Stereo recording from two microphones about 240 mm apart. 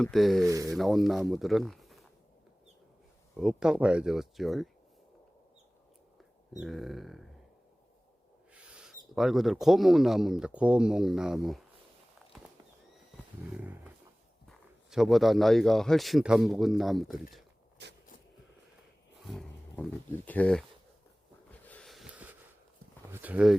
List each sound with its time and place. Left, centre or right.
0.0 s speech: centre
0.4 s speech: centre
0.7 s speech: centre
3.3 s speech: centre
6.5 s speech: centre
8.5 s speech: centre
14.4 s speech: centre
17.8 s a sound: right
19.2 s speech: centre
21.6 s a sound: centre
23.1 s speech: centre